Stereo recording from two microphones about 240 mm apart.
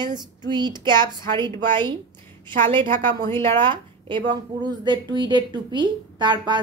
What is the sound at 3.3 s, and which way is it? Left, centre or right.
Speech, centre.